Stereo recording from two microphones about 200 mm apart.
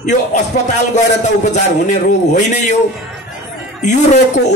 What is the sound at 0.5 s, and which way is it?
A man's voice, 45° left (ahead or behind).